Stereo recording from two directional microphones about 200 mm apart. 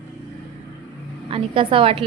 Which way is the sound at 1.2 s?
25° right (ahead or behind).